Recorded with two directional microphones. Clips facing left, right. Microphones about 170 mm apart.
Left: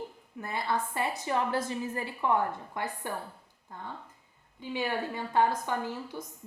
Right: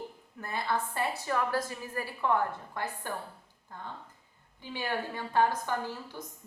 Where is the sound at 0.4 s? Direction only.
20° left (ahead or behind).